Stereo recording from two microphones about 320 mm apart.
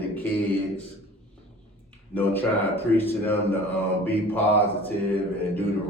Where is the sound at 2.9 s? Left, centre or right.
Centre.